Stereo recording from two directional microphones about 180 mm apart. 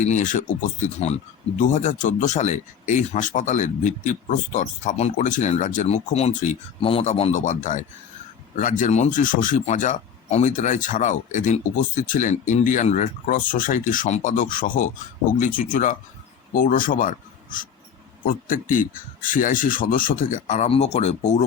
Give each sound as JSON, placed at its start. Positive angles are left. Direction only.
{"t": 0.1, "sound": "speech", "side_deg": 45}